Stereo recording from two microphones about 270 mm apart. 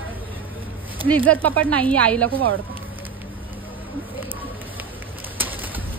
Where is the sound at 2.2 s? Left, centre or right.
Right.